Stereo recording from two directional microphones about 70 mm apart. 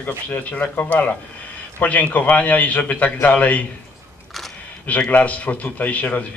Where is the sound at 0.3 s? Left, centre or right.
Left.